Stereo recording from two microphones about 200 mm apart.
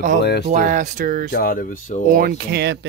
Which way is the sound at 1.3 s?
45° left (ahead or behind).